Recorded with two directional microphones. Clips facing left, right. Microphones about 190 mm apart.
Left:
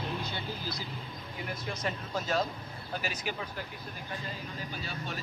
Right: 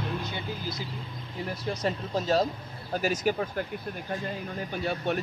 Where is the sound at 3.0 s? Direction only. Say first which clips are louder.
Right 13 dB; 45° right (ahead or behind).